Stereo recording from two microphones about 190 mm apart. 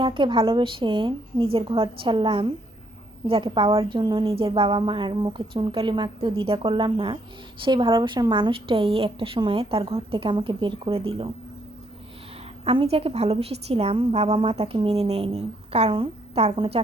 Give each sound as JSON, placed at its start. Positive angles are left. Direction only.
{"t": 0.0, "sound": "a woman's voice", "side_deg": -25}
{"t": 12.6, "sound": "a woman's voice", "side_deg": -30}